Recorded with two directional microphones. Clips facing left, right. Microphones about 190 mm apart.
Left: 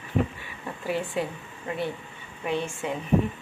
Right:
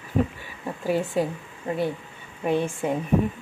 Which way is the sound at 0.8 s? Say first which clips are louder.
Right 4 dB; 40° right (ahead or behind).